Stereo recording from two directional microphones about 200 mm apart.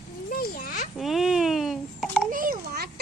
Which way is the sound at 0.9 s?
Centre (ahead or behind).